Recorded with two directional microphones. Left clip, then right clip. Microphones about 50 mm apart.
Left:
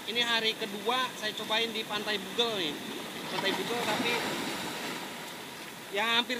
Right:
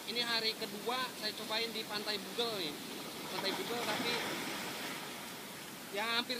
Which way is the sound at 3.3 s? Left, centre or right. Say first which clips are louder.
Left 7 dB; centre.